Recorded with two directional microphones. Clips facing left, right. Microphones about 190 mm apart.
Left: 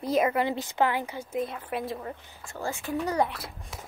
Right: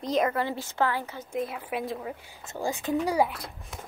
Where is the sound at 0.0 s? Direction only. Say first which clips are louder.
Left 1 dB; 5° left (ahead or behind).